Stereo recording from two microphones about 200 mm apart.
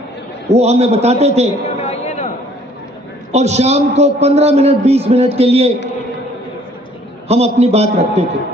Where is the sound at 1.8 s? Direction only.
30° left (ahead or behind).